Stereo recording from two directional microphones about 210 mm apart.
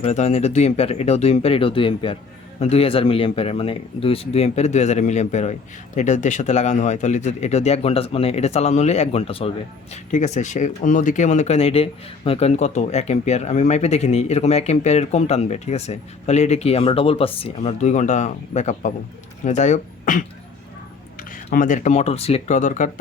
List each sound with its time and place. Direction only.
0.0 s speech: 30° left (ahead or behind)